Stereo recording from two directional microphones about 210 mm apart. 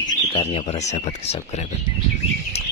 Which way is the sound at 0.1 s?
30° left (ahead or behind).